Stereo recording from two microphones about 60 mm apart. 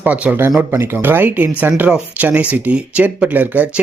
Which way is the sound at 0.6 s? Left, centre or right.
Right.